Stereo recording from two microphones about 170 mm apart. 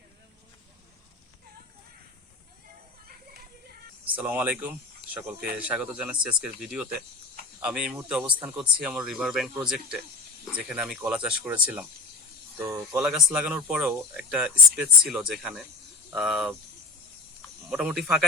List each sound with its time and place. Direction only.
4.0 s speech: 10° right (ahead or behind)
13.0 s speech: 5° right (ahead or behind)
17.7 s speech: 5° right (ahead or behind)